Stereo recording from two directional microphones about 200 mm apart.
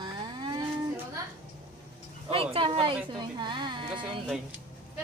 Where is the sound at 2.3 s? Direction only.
25° right (ahead or behind).